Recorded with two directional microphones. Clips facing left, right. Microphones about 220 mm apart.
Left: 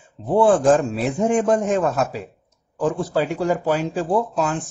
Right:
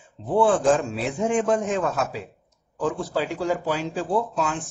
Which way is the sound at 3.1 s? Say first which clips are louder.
Left 4 dB; 50° left (ahead or behind).